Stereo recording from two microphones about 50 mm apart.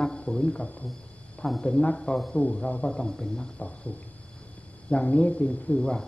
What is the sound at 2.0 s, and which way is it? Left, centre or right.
Speech, centre.